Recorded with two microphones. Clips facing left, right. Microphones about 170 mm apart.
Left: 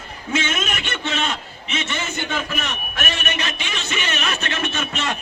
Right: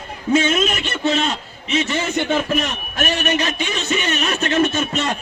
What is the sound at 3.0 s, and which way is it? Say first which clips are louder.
A man's voice: right 8 dB; 35° right (ahead or behind).